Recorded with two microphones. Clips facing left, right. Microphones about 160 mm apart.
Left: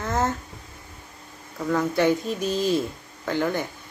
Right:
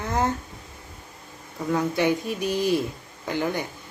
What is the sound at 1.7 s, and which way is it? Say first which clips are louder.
A woman's voice: left 1 dB; 15° right (ahead or behind).